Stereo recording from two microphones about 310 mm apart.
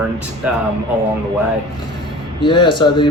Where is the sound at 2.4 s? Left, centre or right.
Centre.